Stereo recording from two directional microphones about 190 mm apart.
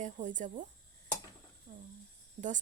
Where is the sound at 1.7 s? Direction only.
45° right (ahead or behind).